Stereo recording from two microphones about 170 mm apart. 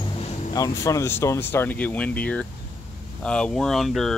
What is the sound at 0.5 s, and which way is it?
Speech, 20° left (ahead or behind).